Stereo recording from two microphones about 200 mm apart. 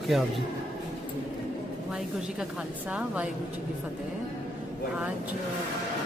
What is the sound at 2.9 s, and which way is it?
Speech, 5° right (ahead or behind).